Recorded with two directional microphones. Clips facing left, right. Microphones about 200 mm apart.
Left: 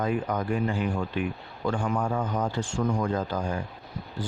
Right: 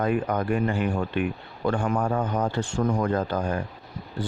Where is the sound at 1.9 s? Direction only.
40° right (ahead or behind).